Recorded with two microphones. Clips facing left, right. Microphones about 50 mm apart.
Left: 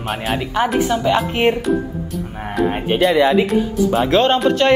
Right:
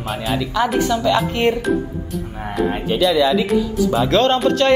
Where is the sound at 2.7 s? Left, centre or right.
Left.